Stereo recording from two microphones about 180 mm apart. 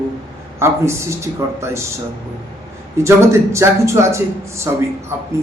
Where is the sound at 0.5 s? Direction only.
15° right (ahead or behind).